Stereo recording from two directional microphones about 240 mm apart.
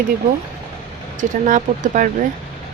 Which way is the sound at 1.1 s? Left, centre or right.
Right.